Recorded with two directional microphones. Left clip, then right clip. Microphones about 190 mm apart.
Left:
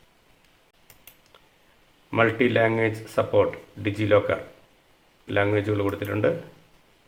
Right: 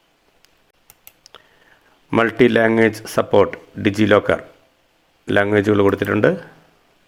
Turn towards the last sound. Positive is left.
turn(degrees=-45)  # may be behind; listen again after turning